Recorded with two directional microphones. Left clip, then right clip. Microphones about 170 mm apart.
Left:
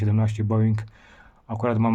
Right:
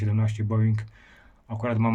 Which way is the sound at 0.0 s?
50° left (ahead or behind).